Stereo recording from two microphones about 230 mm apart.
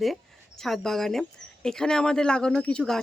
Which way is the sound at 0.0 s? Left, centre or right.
Centre.